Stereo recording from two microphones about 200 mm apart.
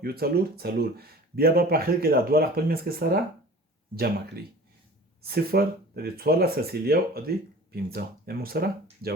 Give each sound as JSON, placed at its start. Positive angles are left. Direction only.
{"t": 0.0, "sound": "speech", "side_deg": -50}
{"t": 5.2, "sound": "speech", "side_deg": -50}